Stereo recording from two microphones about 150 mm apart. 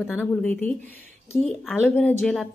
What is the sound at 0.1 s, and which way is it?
A woman's voice, 10° left (ahead or behind).